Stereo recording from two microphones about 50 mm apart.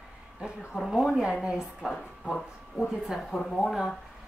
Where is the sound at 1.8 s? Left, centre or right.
Centre.